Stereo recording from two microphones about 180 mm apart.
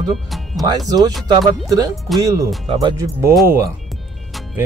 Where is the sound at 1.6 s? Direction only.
20° right (ahead or behind).